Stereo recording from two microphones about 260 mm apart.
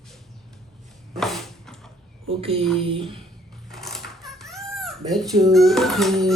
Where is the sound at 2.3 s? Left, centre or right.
Right.